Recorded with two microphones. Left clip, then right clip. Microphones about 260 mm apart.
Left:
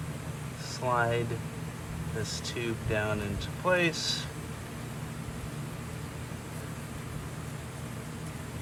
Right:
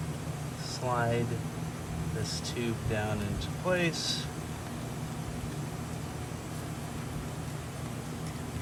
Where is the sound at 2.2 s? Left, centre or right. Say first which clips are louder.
Left 1 dB; right.